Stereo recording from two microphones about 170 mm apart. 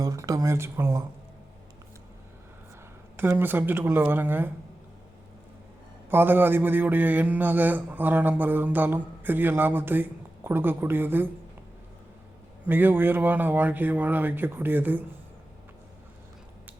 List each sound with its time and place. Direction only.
0.0 s speech: 20° right (ahead or behind)
3.2 s a man's voice: 15° right (ahead or behind)
6.1 s a man's voice: 10° right (ahead or behind)
12.6 s a man's voice: 10° right (ahead or behind)